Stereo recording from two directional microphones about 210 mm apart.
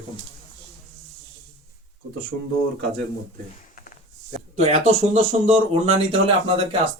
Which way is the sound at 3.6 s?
40° left (ahead or behind).